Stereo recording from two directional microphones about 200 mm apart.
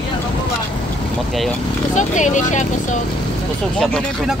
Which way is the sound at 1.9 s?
40° left (ahead or behind).